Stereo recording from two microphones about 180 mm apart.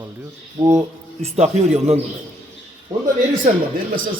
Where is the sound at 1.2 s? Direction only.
35° right (ahead or behind).